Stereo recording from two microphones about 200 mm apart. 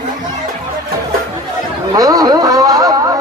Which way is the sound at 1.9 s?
20° right (ahead or behind).